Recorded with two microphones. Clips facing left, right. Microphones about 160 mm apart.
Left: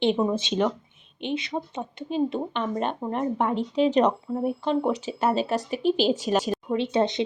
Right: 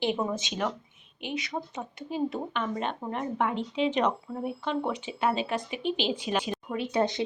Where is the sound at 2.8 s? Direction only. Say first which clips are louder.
Left 5 dB; 40° left (ahead or behind).